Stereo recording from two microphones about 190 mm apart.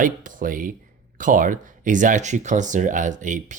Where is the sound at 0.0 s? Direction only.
45° right (ahead or behind).